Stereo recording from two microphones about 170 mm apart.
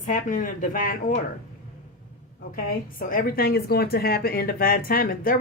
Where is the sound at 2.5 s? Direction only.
55° left (ahead or behind).